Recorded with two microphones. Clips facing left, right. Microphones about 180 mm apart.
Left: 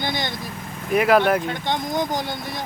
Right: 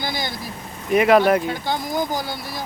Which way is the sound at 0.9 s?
Centre (ahead or behind).